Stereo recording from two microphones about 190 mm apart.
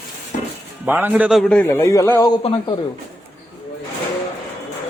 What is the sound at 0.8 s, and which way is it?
Speech, 10° right (ahead or behind).